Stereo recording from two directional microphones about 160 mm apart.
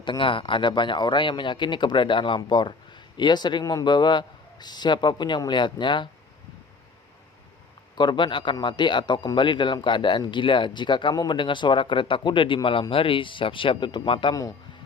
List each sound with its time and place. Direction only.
0.0 s speech: 30° left (ahead or behind)
7.9 s a man's voice: 30° left (ahead or behind)